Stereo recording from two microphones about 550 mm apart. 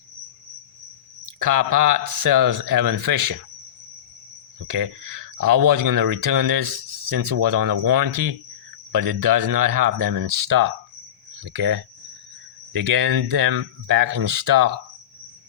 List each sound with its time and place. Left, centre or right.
1.2 s speech: right
4.7 s speech: right
11.4 s speech: centre
12.9 s speech: right